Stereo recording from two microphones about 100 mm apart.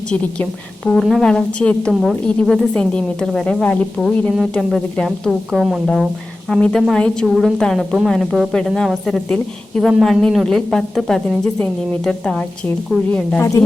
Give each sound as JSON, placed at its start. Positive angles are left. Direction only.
{"t": 0.9, "sound": "a woman's voice", "side_deg": 0}
{"t": 13.4, "sound": "speech", "side_deg": 30}